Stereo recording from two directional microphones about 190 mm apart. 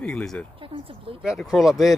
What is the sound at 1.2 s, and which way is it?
Speech, centre (ahead or behind).